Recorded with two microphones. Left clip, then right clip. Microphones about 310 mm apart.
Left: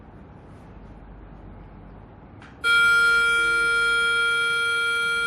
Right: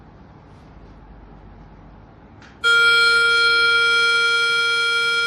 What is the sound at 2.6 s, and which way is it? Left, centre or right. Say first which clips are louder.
Music: right 3 dB; right.